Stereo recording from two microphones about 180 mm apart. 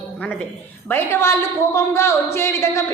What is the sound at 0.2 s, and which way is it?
A woman's voice, 5° left (ahead or behind).